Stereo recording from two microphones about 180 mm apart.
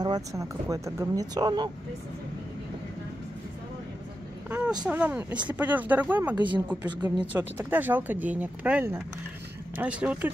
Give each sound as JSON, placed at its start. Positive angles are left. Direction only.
{"t": 0.0, "sound": "speech", "side_deg": -20}
{"t": 4.5, "sound": "vehicle", "side_deg": -10}
{"t": 4.8, "sound": "speech", "side_deg": -10}